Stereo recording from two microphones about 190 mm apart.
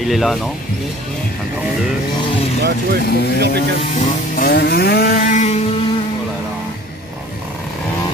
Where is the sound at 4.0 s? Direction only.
50° left (ahead or behind).